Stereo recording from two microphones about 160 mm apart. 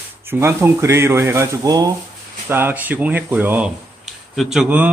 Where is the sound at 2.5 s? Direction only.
10° right (ahead or behind).